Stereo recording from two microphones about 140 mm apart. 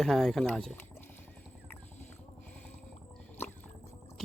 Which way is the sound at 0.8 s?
15° left (ahead or behind).